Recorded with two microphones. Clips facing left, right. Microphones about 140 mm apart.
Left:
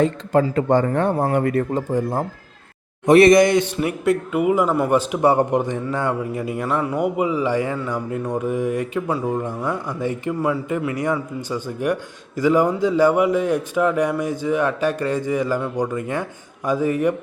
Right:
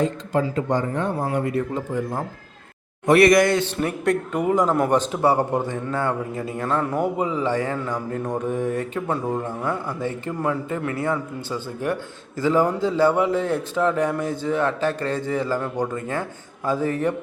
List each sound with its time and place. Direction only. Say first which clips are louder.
0.0 s speech: left 4 dB; 65° left (ahead or behind)
1.7 s speech: left 4 dB; 35° left (ahead or behind)
3.1 s speech: left 3 dB; 25° left (ahead or behind)